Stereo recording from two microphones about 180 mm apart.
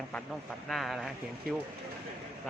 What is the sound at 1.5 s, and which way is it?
Speech, 55° right (ahead or behind).